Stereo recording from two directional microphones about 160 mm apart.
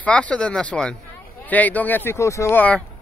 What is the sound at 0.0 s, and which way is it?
Speech, 10° left (ahead or behind).